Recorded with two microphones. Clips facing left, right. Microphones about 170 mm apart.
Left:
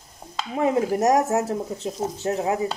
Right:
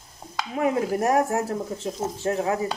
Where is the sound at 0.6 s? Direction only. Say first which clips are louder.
Left 3 dB; 20° left (ahead or behind).